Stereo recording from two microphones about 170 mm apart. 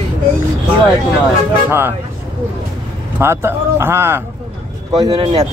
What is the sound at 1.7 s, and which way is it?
Speech, 10° right (ahead or behind).